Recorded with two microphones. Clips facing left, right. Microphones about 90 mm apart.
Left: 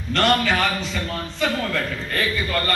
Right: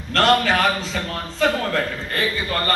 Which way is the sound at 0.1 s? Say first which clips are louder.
Right 2 dB; 45° right (ahead or behind).